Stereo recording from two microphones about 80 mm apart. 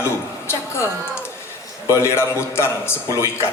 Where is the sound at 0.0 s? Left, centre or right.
Left.